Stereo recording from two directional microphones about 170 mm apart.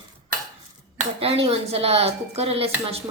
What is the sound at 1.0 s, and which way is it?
Speech, 35° right (ahead or behind).